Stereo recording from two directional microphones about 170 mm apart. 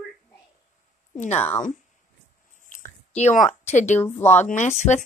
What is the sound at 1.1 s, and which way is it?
Speech, 45° left (ahead or behind).